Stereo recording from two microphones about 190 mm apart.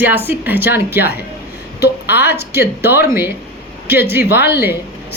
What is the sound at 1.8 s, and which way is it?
Speech, 60° left (ahead or behind).